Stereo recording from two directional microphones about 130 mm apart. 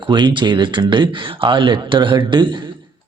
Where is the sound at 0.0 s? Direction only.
35° right (ahead or behind).